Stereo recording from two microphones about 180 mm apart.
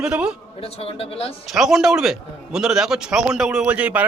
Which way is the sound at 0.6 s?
30° left (ahead or behind).